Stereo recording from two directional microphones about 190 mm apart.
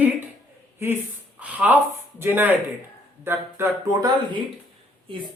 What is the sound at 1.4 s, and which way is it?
Speech, 10° right (ahead or behind).